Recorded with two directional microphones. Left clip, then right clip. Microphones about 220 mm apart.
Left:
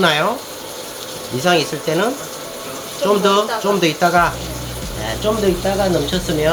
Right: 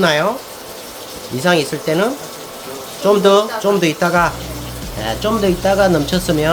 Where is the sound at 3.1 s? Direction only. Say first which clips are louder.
Right 3 dB; 20° right (ahead or behind).